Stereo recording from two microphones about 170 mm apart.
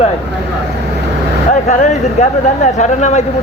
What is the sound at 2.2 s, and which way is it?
Speech, 45° left (ahead or behind).